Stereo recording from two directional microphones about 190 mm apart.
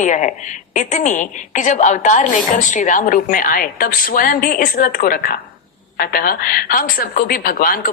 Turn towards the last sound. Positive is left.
turn(degrees=50)  # may be behind; listen again after turning